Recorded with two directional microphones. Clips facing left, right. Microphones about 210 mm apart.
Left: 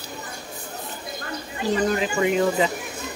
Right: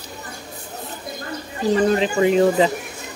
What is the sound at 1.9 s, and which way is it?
Speech, 30° right (ahead or behind).